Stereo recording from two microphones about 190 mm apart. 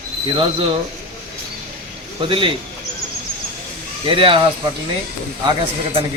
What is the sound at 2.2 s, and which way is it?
Speech, 25° right (ahead or behind).